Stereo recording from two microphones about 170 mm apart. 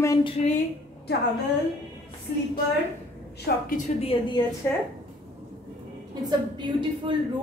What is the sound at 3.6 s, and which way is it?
Speech, 50° left (ahead or behind).